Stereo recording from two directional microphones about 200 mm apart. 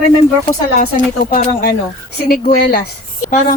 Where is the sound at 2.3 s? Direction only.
45° left (ahead or behind).